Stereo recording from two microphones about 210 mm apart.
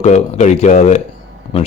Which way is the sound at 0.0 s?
35° left (ahead or behind).